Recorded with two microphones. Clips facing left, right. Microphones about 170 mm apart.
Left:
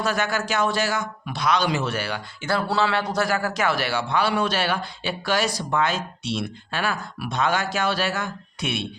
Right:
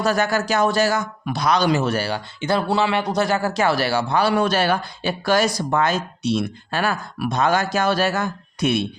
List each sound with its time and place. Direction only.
0.0 s a man's voice: 40° right (ahead or behind)
2.4 s a man's voice: 20° right (ahead or behind); by 8.9 s 40° right (ahead or behind)